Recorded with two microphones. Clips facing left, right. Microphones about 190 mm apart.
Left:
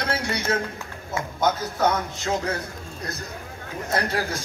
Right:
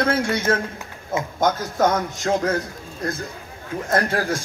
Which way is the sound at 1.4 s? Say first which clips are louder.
Right 3 dB; 45° right (ahead or behind).